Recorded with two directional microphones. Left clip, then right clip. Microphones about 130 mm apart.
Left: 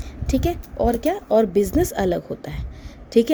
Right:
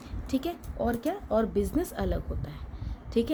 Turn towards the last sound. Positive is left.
turn(degrees=55)  # may be behind; listen again after turning